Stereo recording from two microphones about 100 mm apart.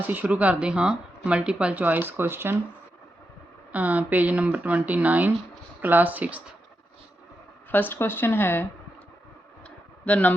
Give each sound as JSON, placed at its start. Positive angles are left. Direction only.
{"t": 0.1, "sound": "speech", "side_deg": -15}
{"t": 3.7, "sound": "speech", "side_deg": -15}
{"t": 7.7, "sound": "speech", "side_deg": 20}
{"t": 9.6, "sound": "a sound", "side_deg": 15}